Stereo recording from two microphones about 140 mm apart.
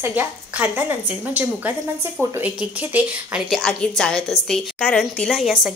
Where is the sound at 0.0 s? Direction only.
10° right (ahead or behind).